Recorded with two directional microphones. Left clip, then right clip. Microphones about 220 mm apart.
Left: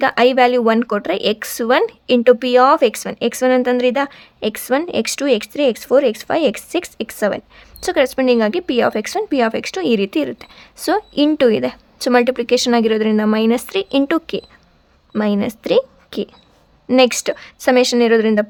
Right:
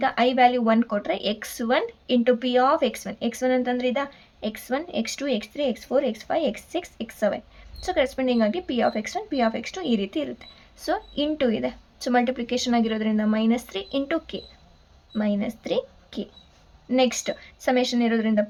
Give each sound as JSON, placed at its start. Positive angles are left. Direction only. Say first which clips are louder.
{"t": 0.0, "sound": "speech", "louder": "left 7 dB", "side_deg": 40}